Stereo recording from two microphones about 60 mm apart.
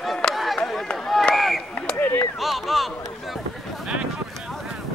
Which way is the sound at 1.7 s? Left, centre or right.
Centre.